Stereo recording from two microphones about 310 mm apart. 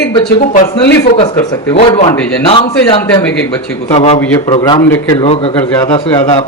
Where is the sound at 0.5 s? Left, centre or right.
Left.